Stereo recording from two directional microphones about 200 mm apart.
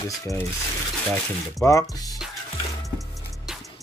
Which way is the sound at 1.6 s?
15° left (ahead or behind).